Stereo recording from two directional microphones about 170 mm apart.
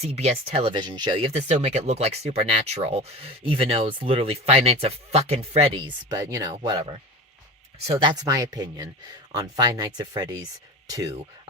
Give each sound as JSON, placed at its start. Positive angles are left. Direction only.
{"t": 0.0, "sound": "speech", "side_deg": -40}